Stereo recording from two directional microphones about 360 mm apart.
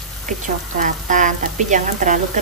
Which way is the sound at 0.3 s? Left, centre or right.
Right.